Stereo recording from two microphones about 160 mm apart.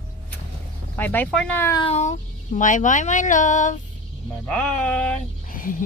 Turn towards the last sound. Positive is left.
turn(degrees=60)  # may be behind; listen again after turning